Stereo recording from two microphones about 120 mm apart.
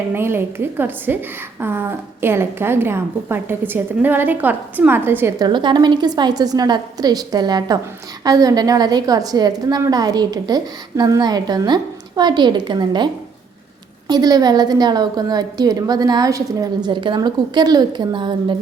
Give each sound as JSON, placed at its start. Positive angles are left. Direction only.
{"t": 0.1, "sound": "a woman's voice", "side_deg": -20}
{"t": 5.4, "sound": "a woman's voice", "side_deg": -40}
{"t": 14.1, "sound": "a woman's voice", "side_deg": -35}
{"t": 16.9, "sound": "a woman's voice", "side_deg": -40}